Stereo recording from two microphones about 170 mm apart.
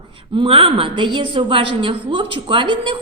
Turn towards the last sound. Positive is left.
turn(degrees=-30)  # may be behind; listen again after turning